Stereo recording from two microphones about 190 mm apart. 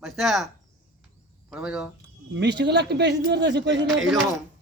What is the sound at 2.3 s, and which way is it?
A man's voice, 65° right (ahead or behind).